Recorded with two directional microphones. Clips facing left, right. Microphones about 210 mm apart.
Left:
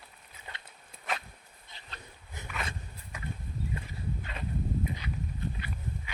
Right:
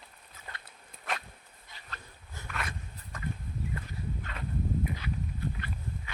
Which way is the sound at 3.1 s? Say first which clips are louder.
Right 3 dB; 10° left (ahead or behind).